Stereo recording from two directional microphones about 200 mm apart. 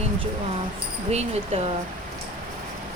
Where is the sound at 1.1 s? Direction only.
35° right (ahead or behind).